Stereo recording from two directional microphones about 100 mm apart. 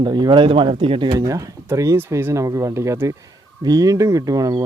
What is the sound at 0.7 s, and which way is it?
Speech, 65° right (ahead or behind).